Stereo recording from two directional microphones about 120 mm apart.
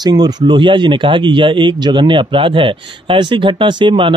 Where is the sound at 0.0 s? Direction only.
35° right (ahead or behind).